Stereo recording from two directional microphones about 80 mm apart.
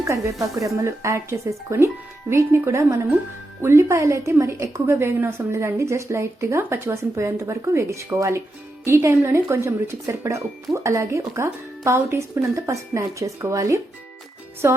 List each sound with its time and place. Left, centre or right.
0.0 s speech: right
14.6 s music: right